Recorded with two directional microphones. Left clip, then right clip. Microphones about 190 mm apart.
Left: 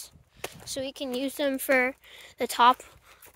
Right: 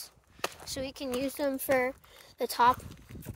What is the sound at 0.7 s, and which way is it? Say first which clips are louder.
A woman's voice: left 3 dB; 30° left (ahead or behind).